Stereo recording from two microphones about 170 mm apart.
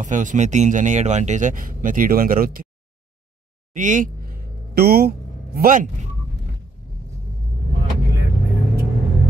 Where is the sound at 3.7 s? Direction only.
50° right (ahead or behind).